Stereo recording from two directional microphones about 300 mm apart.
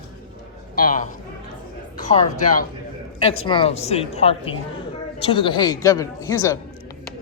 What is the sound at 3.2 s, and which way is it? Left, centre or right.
A woman's voice, centre.